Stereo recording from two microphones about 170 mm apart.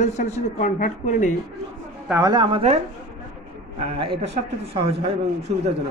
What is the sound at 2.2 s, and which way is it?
Speech, 25° right (ahead or behind).